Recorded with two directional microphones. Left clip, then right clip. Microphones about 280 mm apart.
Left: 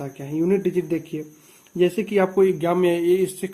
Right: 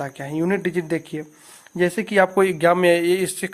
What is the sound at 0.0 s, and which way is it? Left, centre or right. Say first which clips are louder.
Speech: even; right.